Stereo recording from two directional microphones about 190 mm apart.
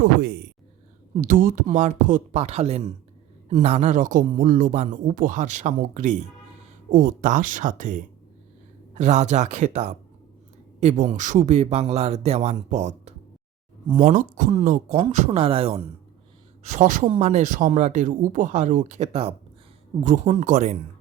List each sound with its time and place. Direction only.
0.0 s a sound: 65° right (ahead or behind)
1.1 s speech: 45° right (ahead or behind); by 15.8 s 30° right (ahead or behind)
16.6 s speech: 40° right (ahead or behind)